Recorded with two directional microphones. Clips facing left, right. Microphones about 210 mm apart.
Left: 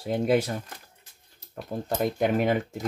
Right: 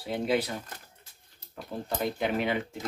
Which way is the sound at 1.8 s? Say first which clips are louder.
Left 5 dB; 45° left (ahead or behind).